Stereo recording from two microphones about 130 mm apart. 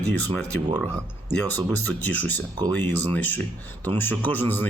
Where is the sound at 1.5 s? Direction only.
15° left (ahead or behind).